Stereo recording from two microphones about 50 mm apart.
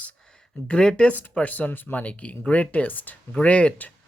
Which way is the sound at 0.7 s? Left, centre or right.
Centre.